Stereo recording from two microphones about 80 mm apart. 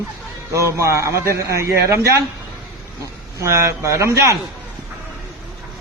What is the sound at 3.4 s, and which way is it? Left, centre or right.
Speech, right.